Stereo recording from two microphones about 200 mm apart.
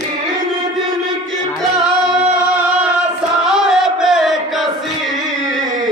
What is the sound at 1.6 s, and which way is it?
Singing, 5° right (ahead or behind).